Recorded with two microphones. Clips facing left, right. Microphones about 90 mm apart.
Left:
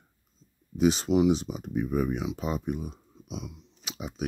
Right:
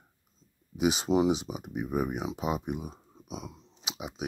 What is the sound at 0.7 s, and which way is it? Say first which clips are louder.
Speech: left 2 dB; 15° right (ahead or behind).